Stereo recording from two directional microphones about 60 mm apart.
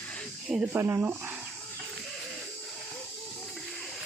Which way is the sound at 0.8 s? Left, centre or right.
Right.